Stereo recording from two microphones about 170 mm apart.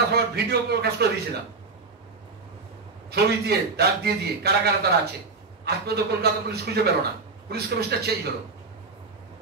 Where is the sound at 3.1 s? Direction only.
70° right (ahead or behind).